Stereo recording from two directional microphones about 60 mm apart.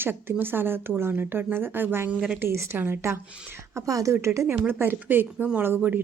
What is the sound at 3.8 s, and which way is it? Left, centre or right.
Speech, right.